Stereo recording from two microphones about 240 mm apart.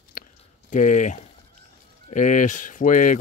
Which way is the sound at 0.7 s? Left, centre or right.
Left.